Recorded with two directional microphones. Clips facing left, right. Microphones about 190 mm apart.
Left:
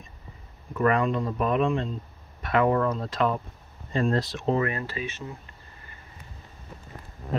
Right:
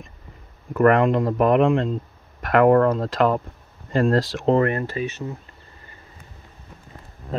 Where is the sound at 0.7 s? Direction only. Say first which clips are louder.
Right 7 dB; 65° right (ahead or behind); by 1.9 s 90° right.